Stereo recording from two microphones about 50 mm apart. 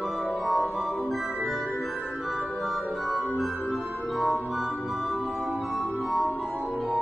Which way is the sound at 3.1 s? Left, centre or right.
Centre.